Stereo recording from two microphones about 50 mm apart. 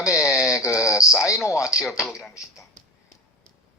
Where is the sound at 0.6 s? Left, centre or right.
Left.